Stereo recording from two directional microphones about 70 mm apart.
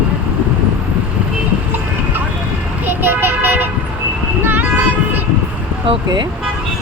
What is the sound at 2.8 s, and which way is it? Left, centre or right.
Vehicle, right.